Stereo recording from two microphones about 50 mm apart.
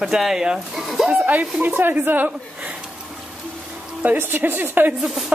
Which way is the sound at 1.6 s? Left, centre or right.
Right.